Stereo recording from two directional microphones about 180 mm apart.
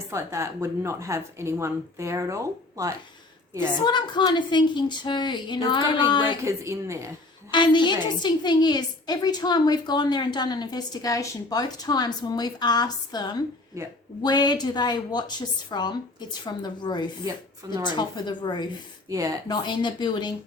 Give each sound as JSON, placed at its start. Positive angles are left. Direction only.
{"t": 0.1, "sound": "speech", "side_deg": -15}
{"t": 3.8, "sound": "a woman's voice", "side_deg": 25}
{"t": 6.4, "sound": "speech", "side_deg": -15}
{"t": 7.5, "sound": "a woman's voice", "side_deg": 25}
{"t": 13.8, "sound": "speech", "side_deg": -15}
{"t": 14.2, "sound": "a woman's voice", "side_deg": 25}
{"t": 19.0, "sound": "speech", "side_deg": -20}
{"t": 19.5, "sound": "a woman's voice", "side_deg": 25}